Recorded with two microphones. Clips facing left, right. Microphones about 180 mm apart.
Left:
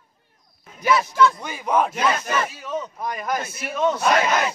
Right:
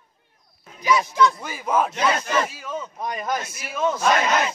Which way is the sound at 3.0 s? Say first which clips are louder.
Even; 20° right (ahead or behind).